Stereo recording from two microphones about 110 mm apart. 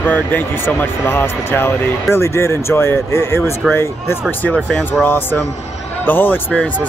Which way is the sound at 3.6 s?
Centre (ahead or behind).